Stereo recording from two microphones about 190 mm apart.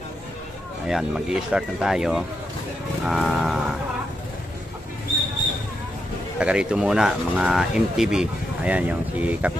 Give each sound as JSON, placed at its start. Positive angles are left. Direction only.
{"t": 0.8, "sound": "speech", "side_deg": -5}
{"t": 6.4, "sound": "speech", "side_deg": -5}